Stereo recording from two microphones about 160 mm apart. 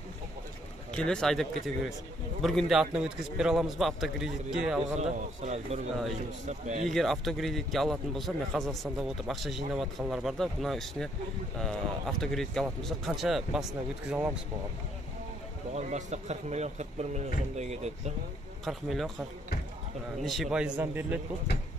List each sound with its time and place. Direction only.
0.9 s a man's voice: 5° left (ahead or behind)
4.9 s a man's voice: 45° right (ahead or behind)
6.9 s a man's voice: centre (ahead or behind)
15.7 s a man's voice: 45° right (ahead or behind)
18.7 s a man's voice: centre (ahead or behind)
20.2 s a man's voice: centre (ahead or behind)